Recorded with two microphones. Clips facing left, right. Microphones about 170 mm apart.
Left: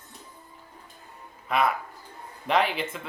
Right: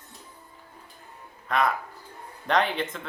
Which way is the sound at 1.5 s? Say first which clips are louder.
Even; 5° left (ahead or behind).